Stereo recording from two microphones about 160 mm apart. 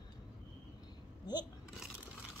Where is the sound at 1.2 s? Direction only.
25° left (ahead or behind).